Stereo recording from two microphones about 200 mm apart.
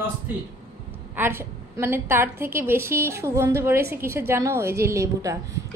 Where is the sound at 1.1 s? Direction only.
10° right (ahead or behind).